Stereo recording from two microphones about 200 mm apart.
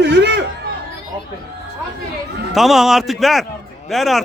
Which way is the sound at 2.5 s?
Centre (ahead or behind).